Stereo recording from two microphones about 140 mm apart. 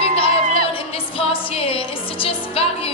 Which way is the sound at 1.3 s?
40° left (ahead or behind).